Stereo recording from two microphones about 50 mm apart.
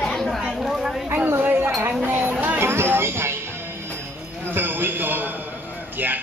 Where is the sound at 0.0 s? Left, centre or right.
Centre.